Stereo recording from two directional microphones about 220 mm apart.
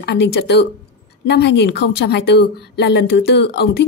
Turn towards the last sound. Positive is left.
turn(degrees=50)  # may be behind; listen again after turning